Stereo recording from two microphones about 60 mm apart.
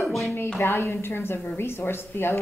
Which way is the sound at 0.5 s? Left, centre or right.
Left.